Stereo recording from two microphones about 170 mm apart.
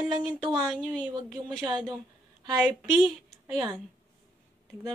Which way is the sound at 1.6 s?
25° right (ahead or behind).